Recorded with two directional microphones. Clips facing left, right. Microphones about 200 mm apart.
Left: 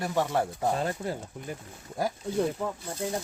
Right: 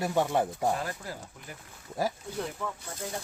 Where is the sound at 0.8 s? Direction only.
25° left (ahead or behind).